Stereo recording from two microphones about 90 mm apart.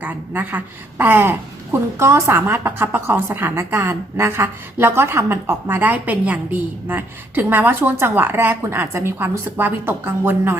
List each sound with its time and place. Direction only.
0.0 s a woman's voice: 20° right (ahead or behind)